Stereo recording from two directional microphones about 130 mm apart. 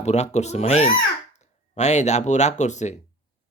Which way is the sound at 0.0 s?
60° left (ahead or behind).